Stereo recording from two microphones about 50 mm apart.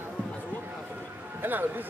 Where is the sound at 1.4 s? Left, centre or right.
Right.